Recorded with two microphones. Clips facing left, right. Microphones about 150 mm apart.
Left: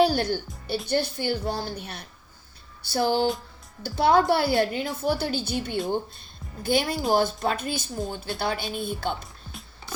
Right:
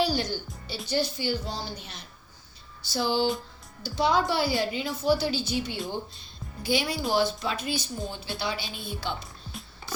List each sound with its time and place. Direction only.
0.0 s a woman's voice: 55° left (ahead or behind)
9.2 s music: centre (ahead or behind)